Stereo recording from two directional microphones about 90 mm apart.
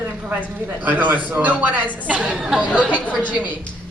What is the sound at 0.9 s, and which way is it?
A woman's voice, 20° right (ahead or behind).